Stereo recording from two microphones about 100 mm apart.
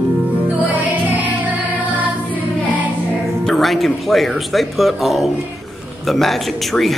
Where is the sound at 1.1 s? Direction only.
15° right (ahead or behind).